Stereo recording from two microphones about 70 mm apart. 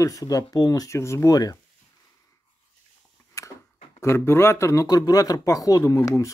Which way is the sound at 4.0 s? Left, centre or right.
Left.